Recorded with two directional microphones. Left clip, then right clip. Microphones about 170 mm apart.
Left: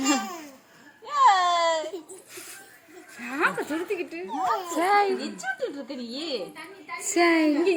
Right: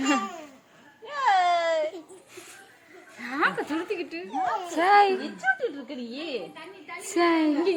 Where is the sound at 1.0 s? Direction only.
15° right (ahead or behind).